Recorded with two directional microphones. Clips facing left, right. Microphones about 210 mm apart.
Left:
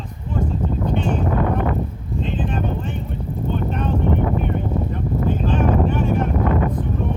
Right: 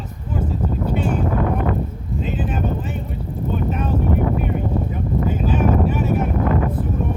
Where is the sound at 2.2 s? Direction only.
5° right (ahead or behind).